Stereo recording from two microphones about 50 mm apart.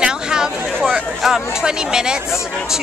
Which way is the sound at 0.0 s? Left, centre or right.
Centre.